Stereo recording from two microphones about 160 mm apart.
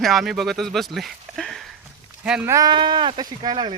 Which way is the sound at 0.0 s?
Centre (ahead or behind).